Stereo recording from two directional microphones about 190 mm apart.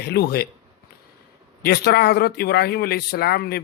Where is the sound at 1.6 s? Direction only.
55° left (ahead or behind).